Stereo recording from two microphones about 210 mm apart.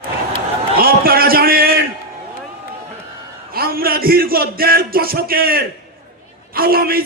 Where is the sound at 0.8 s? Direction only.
45° right (ahead or behind).